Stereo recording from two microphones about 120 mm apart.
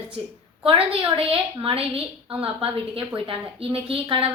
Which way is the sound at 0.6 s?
50° right (ahead or behind).